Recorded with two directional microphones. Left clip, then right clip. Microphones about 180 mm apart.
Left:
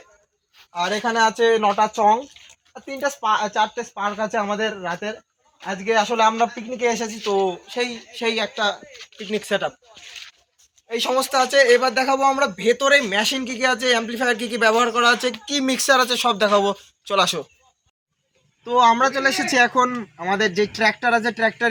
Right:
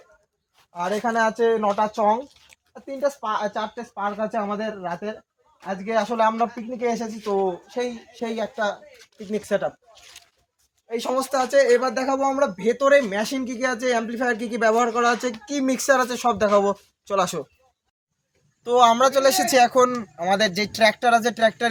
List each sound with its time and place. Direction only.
0.7 s speech: 15° right (ahead or behind)
0.9 s speech: 5° left (ahead or behind)
1.4 s speech: 25° left (ahead or behind)
7.2 s speech: 15° left (ahead or behind)
10.8 s speech: centre (ahead or behind)
18.6 s speech: 40° right (ahead or behind)